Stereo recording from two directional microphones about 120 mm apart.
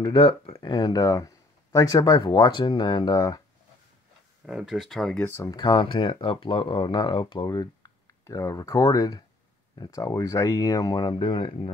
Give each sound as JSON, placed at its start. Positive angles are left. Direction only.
{"t": 0.0, "sound": "speech", "side_deg": 45}
{"t": 4.5, "sound": "speech", "side_deg": -5}
{"t": 5.2, "sound": "speech", "side_deg": 25}
{"t": 5.5, "sound": "speech", "side_deg": 40}
{"t": 8.3, "sound": "speech", "side_deg": 25}